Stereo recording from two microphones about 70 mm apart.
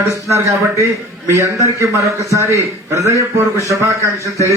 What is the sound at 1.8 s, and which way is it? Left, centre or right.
A man's voice, right.